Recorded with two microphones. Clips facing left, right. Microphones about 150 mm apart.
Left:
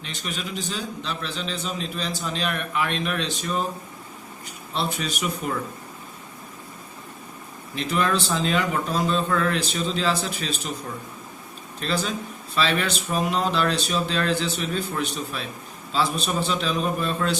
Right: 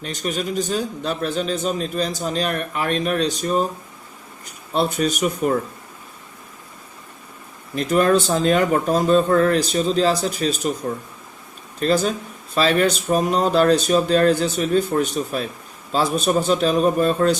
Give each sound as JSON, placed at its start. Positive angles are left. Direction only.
{"t": 0.0, "sound": "a man's voice", "side_deg": -45}
{"t": 7.8, "sound": "a man's voice", "side_deg": -45}